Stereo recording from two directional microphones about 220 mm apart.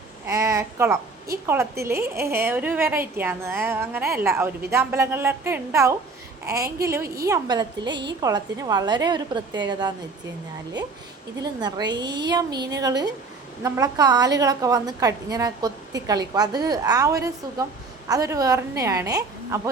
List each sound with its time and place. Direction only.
0.3 s a woman's voice: 15° right (ahead or behind)
11.6 s a woman's voice: 20° right (ahead or behind)